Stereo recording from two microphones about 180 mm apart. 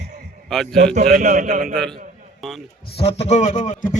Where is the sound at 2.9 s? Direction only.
35° left (ahead or behind).